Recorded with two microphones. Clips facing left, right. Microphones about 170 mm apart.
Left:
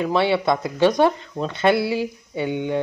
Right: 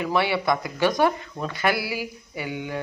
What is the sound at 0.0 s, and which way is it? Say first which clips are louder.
Speech: left 4 dB; 25° left (ahead or behind).